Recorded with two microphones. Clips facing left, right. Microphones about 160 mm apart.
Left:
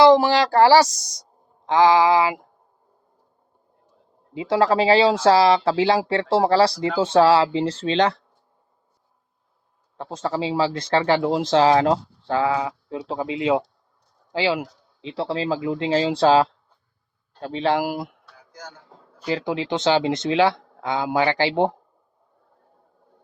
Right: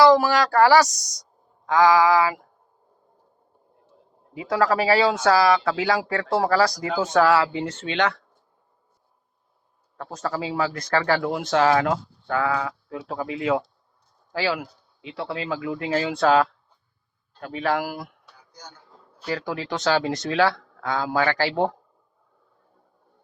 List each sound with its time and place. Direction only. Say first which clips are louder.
0.0 s a woman's voice: left 2 dB; 25° left (ahead or behind)
4.4 s speech: left 3 dB; 25° left (ahead or behind)
10.0 s speech: left 3 dB; 25° left (ahead or behind)
15.0 s speech: left 5 dB; 30° left (ahead or behind)
18.3 s a sound: left 5 dB; 90° left
19.3 s speech: left 4 dB; 20° left (ahead or behind)